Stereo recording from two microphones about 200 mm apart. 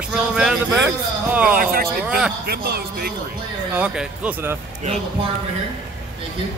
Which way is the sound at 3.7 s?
5° right (ahead or behind).